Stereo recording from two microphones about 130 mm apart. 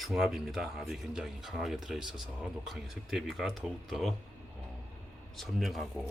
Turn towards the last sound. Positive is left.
turn(degrees=0)  # may be behind; listen again after turning